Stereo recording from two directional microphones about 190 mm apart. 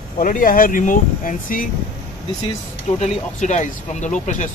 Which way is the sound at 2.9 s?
35° left (ahead or behind).